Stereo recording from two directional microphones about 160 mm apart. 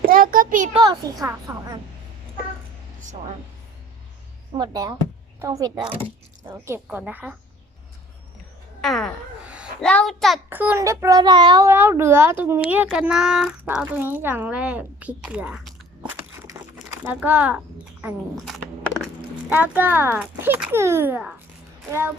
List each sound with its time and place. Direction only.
0.1 s a sound: 60° right (ahead or behind)
0.7 s a child's voice: 25° right (ahead or behind)
4.5 s a child's voice: 25° right (ahead or behind)
6.5 s speech: 15° right (ahead or behind)
8.8 s a sound: centre (ahead or behind)
9.8 s a child's voice: 5° left (ahead or behind)
10.5 s a child's voice: 10° right (ahead or behind); by 11.7 s 25° right (ahead or behind)
11.7 s speech: 15° right (ahead or behind)